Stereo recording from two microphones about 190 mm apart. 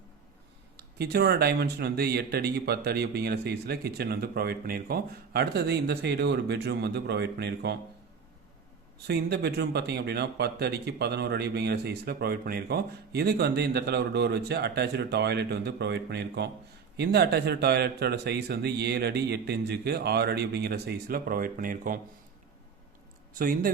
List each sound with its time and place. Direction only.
0.8 s speech: 55° right (ahead or behind)
9.0 s speech: 60° right (ahead or behind)
23.4 s a man's voice: 50° right (ahead or behind)